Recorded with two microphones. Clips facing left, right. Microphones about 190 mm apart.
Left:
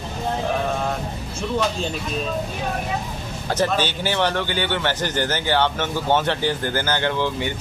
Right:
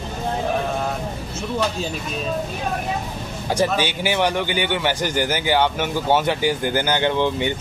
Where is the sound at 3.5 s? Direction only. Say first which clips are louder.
Right 1 dB; 10° right (ahead or behind).